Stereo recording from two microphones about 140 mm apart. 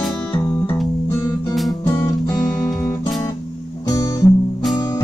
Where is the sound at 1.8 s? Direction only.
15° left (ahead or behind).